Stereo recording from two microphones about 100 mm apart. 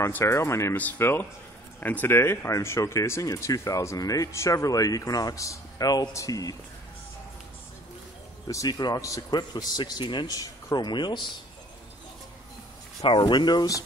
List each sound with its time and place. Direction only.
0.0 s speech: 30° left (ahead or behind)
8.5 s speech: 35° left (ahead or behind)
13.0 s speech: 50° left (ahead or behind)